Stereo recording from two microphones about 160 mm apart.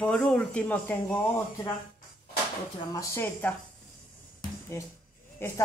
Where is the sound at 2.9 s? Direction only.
20° left (ahead or behind).